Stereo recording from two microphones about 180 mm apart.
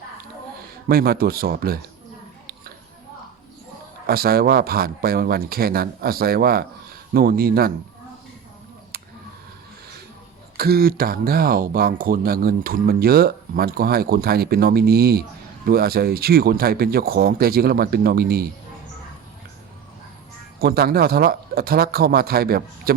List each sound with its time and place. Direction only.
0.9 s speech: 60° right (ahead or behind)
4.0 s speech: 55° right (ahead or behind)
8.9 s a sound: 60° right (ahead or behind)
10.6 s speech: 55° right (ahead or behind)
20.6 s speech: 60° right (ahead or behind)